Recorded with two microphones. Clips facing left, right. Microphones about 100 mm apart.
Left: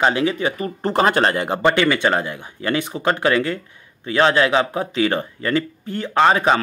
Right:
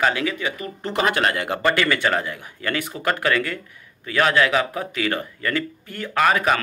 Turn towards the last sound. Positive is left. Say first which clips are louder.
# left 4 dB
turn(degrees=25)  # may be behind; listen again after turning